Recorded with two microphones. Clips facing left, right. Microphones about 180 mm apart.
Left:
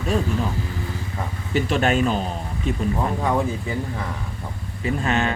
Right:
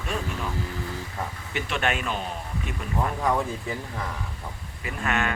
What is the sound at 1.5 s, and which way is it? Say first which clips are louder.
Speech: left 8 dB; 35° left (ahead or behind).